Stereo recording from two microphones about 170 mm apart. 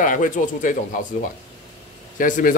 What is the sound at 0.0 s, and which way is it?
Speech, 50° left (ahead or behind).